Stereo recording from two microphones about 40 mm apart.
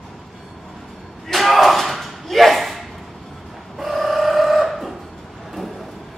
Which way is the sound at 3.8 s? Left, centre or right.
Centre.